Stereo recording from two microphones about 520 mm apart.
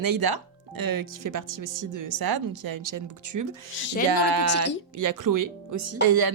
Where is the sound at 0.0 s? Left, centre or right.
Right.